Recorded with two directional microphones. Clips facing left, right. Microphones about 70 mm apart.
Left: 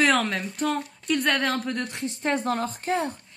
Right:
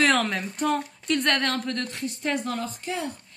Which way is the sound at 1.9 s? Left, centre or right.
Left.